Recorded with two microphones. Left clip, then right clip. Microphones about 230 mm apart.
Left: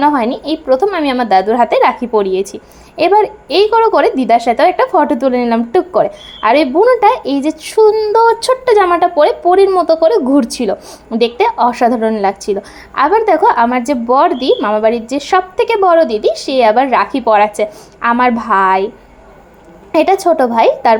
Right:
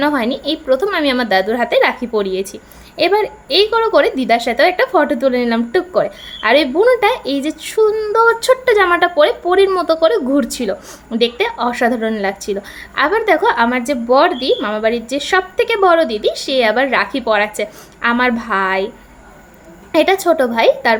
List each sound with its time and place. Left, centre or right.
0.0 s a woman's voice: centre
19.9 s a woman's voice: centre